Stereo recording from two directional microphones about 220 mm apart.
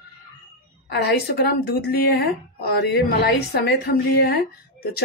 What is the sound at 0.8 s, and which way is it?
A woman's voice, 45° left (ahead or behind).